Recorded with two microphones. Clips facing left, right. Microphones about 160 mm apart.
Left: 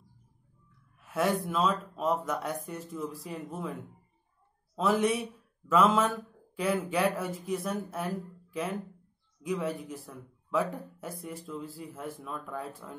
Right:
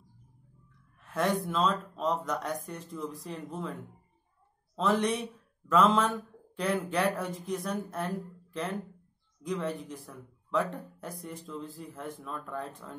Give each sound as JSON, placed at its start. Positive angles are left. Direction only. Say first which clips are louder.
{"t": 1.0, "sound": "speech", "louder": "left 1 dB", "side_deg": 5}
{"t": 4.7, "sound": "speech", "louder": "left 1 dB", "side_deg": 5}